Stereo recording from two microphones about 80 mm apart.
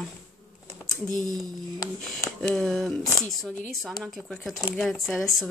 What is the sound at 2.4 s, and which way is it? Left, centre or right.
Speech, centre.